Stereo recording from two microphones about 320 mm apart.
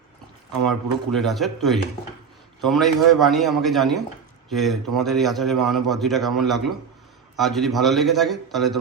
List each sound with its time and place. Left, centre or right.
1.1 s a man's voice: centre